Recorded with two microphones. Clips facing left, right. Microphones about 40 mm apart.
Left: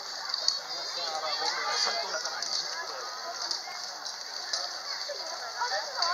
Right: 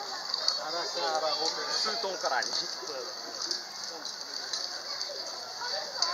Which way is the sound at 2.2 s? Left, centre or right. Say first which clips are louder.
Right 7 dB; right.